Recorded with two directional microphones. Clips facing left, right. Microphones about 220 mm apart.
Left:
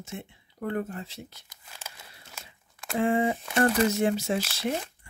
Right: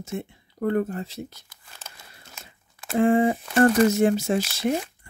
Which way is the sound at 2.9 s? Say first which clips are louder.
Right 5 dB; 50° right (ahead or behind).